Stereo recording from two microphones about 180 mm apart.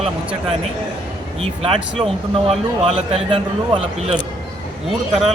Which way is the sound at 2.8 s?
30° right (ahead or behind).